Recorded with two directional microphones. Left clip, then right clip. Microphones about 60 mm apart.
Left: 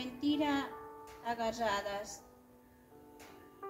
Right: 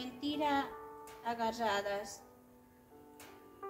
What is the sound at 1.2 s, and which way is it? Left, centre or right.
Speech, right.